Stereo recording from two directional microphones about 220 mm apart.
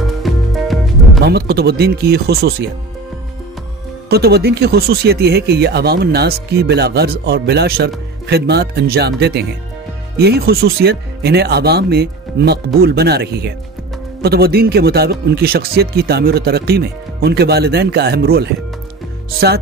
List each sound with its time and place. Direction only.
0.0 s music: centre (ahead or behind)
1.2 s speech: 45° right (ahead or behind)
4.1 s speech: 45° right (ahead or behind)